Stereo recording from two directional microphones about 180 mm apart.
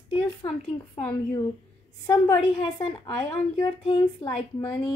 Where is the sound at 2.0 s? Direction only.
15° left (ahead or behind).